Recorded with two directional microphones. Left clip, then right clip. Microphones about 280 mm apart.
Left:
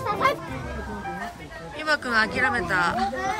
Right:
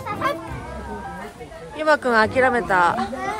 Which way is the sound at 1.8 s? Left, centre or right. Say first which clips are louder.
Right 6 dB; centre.